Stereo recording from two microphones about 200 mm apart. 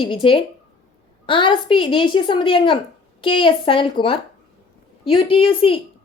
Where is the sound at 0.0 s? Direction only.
25° left (ahead or behind).